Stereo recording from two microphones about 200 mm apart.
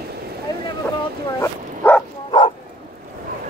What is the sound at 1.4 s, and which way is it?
Bow-wow, 10° left (ahead or behind).